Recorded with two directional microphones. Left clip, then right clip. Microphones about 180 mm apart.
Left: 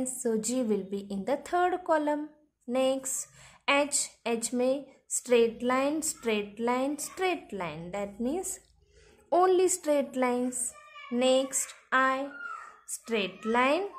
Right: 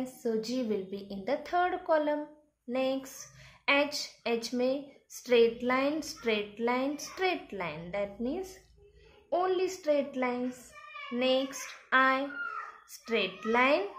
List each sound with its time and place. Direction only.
0.2 s a woman's voice: 30° left (ahead or behind)
11.9 s a woman's voice: 15° left (ahead or behind)